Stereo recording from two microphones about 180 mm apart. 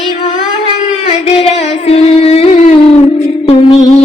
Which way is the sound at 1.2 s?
35° left (ahead or behind).